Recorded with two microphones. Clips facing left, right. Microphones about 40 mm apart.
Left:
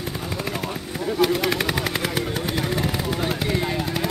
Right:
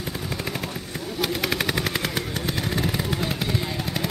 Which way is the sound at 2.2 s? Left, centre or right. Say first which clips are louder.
Left 3 dB; centre.